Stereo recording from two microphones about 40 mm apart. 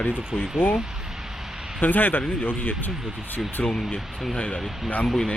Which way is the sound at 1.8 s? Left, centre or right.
Left.